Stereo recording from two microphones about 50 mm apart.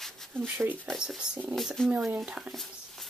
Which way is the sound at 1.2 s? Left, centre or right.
Centre.